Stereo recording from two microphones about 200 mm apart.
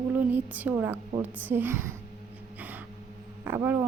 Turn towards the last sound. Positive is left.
turn(degrees=-10)  # may be behind; listen again after turning